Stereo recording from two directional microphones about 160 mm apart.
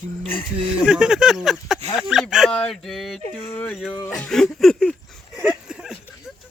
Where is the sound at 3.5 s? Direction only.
10° left (ahead or behind).